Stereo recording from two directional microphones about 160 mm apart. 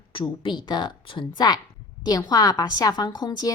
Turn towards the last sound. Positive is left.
turn(degrees=25)  # may be behind; listen again after turning